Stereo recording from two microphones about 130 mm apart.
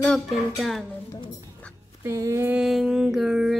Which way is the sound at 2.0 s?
20° right (ahead or behind).